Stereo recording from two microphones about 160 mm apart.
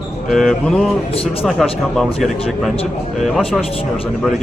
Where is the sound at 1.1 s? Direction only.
35° left (ahead or behind).